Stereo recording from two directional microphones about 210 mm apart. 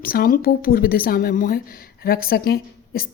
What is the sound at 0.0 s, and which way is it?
A woman's voice, 45° left (ahead or behind).